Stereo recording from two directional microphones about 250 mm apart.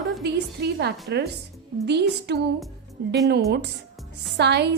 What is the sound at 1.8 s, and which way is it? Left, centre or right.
Music, right.